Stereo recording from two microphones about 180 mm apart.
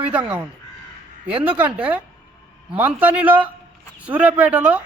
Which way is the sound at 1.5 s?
10° right (ahead or behind).